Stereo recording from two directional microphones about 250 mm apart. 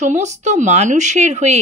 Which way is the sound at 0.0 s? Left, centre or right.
Right.